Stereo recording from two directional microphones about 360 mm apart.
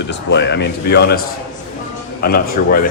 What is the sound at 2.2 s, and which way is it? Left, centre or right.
Speech, left.